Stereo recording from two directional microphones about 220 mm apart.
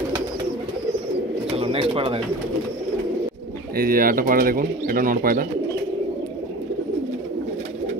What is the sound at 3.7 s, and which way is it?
Speech, 40° right (ahead or behind).